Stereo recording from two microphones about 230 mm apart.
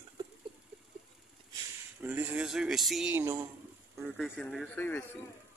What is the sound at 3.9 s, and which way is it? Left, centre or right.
Speech, centre.